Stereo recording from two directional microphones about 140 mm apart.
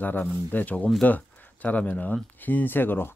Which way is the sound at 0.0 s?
10° left (ahead or behind).